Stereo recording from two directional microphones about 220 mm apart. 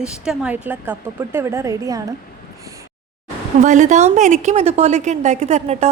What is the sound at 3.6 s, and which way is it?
A woman's voice, 35° right (ahead or behind).